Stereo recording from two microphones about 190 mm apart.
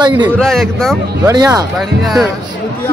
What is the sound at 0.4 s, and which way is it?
Music, centre (ahead or behind).